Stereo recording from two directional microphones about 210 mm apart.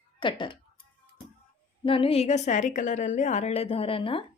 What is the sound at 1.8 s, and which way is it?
Speech, 25° left (ahead or behind).